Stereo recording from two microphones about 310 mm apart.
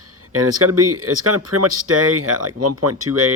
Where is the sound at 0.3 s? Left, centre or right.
Right.